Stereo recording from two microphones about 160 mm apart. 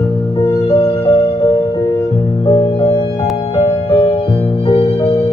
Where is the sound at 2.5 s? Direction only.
30° left (ahead or behind).